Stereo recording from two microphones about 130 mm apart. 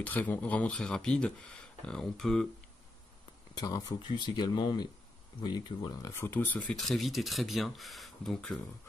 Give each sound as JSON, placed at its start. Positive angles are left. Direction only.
{"t": 0.0, "sound": "speech", "side_deg": 15}
{"t": 3.5, "sound": "speech", "side_deg": 30}
{"t": 6.1, "sound": "speech", "side_deg": 20}